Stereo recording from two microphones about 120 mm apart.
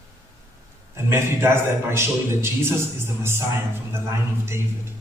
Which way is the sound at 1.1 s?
20° right (ahead or behind).